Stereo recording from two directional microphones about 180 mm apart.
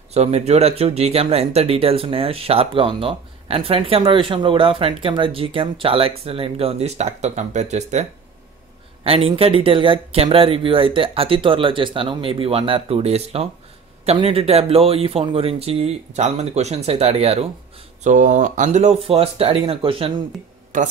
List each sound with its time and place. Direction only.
0.1 s speech: 35° right (ahead or behind)
20.7 s a man's voice: 45° right (ahead or behind)